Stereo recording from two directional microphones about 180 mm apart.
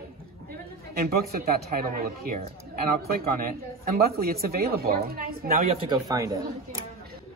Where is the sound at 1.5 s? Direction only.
55° right (ahead or behind).